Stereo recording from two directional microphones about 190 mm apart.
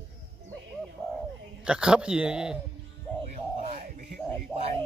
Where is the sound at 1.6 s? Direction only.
5° right (ahead or behind).